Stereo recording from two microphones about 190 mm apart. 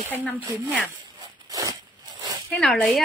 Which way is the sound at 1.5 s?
15° right (ahead or behind).